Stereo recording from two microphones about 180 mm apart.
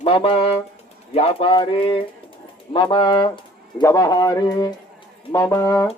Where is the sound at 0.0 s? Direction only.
30° left (ahead or behind).